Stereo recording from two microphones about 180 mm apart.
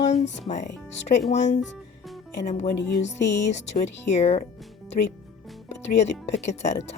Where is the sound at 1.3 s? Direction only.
40° left (ahead or behind).